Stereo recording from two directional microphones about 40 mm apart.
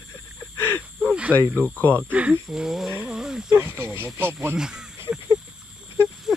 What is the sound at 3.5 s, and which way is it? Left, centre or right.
Snake, right.